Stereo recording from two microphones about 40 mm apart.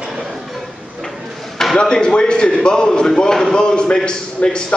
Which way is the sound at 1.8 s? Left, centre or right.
Left.